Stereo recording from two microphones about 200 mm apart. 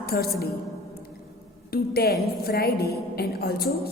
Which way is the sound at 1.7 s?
50° left (ahead or behind).